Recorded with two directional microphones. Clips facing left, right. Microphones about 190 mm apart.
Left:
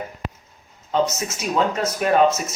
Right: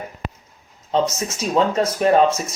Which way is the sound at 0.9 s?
30° right (ahead or behind).